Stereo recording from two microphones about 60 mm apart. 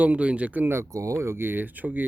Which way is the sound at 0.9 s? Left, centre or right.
Right.